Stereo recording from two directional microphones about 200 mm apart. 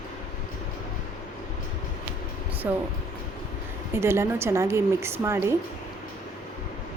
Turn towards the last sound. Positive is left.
turn(degrees=-15)  # may be behind; listen again after turning